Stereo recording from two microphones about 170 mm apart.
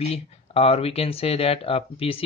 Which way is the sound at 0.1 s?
35° left (ahead or behind).